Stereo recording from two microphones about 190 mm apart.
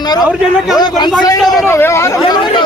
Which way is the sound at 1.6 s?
15° left (ahead or behind).